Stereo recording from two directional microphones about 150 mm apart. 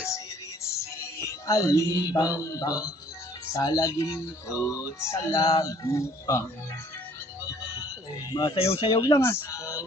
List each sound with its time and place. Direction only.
0.8 s music: 20° left (ahead or behind)
2.0 s speech: 25° left (ahead or behind)
8.3 s speech: 25° left (ahead or behind)
8.5 s speech: 40° left (ahead or behind)
9.0 s speech: 20° left (ahead or behind)